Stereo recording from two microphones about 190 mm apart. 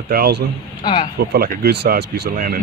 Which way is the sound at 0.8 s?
25° left (ahead or behind).